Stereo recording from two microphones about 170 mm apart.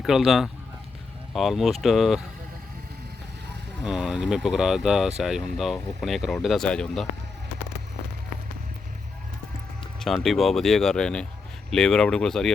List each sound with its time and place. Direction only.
0.0 s speech: centre (ahead or behind)
3.8 s speech: 5° right (ahead or behind)
10.0 s speech: centre (ahead or behind)